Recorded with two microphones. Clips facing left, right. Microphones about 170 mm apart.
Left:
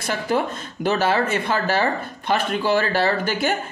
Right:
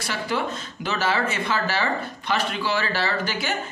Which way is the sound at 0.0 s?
50° left (ahead or behind).